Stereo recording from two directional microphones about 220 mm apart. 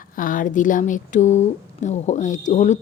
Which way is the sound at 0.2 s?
40° left (ahead or behind).